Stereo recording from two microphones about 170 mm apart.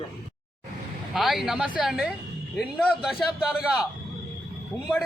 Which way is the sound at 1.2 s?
5° right (ahead or behind).